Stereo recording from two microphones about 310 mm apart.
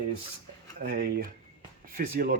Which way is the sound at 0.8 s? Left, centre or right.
Right.